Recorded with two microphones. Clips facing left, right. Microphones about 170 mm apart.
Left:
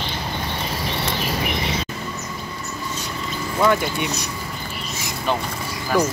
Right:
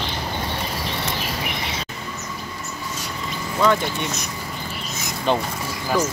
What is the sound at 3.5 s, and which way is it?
Speech, 10° left (ahead or behind).